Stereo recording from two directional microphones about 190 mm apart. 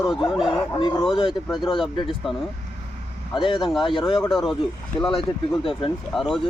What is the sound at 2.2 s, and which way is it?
Speech, centre (ahead or behind).